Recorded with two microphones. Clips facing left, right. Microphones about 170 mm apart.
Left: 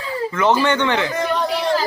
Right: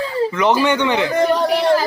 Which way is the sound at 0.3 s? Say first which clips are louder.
Left 1 dB; 15° right (ahead or behind).